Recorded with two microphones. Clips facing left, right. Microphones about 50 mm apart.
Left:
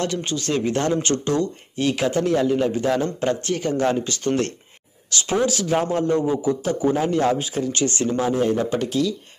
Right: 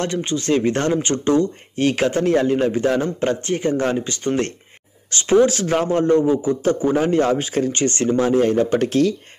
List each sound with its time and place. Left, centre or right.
0.0 s a man's voice: right